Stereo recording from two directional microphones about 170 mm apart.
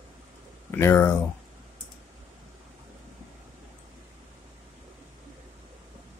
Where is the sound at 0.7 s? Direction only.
15° left (ahead or behind).